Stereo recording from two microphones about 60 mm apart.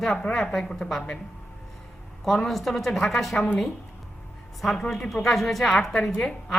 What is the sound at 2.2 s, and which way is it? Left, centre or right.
A woman's voice, centre.